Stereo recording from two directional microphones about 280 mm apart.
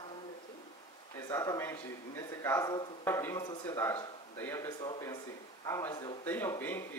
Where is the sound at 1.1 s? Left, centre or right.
Centre.